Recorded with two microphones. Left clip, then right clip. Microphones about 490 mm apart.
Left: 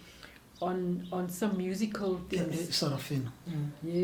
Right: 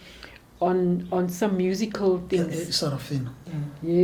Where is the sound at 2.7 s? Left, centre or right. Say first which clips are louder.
Right 5 dB; left.